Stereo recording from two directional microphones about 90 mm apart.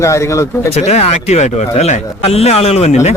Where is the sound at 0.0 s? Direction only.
35° left (ahead or behind).